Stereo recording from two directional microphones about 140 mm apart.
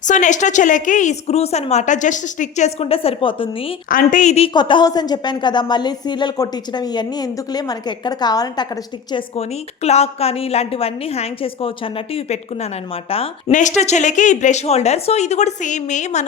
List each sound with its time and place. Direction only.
0.0 s a woman's voice: 60° left (ahead or behind); by 3.8 s 40° left (ahead or behind)
3.8 s a woman's voice: 75° left (ahead or behind); by 4.5 s 50° left (ahead or behind)
4.5 s a woman's voice: 30° left (ahead or behind)
9.3 s a woman's voice: 50° left (ahead or behind)
13.5 s a woman's voice: 60° left (ahead or behind)